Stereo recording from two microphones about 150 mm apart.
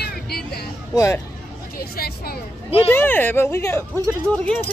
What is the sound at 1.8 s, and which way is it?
Speech, 90° left.